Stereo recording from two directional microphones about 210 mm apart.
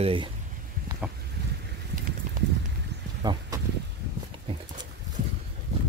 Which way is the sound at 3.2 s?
20° right (ahead or behind).